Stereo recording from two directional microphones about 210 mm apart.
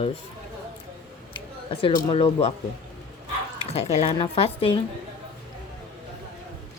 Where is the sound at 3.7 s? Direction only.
30° left (ahead or behind).